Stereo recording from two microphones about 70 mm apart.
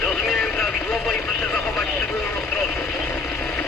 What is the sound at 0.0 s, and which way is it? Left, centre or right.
Vehicle, centre.